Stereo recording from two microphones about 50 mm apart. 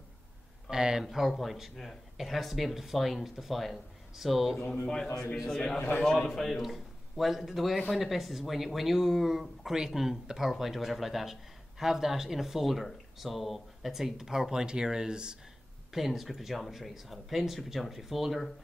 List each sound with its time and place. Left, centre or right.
0.7 s speech: centre
4.8 s a man's voice: centre
5.8 s a man's voice: left
6.2 s a man's voice: centre
15.9 s speech: centre